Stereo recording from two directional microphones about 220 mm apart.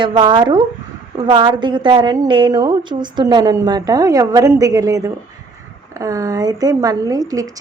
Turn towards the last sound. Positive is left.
turn(degrees=-15)  # may be behind; listen again after turning